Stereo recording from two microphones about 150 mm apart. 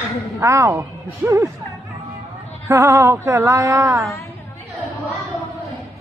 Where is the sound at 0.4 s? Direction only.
20° right (ahead or behind).